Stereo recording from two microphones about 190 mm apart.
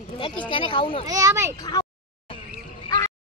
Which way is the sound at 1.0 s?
20° right (ahead or behind).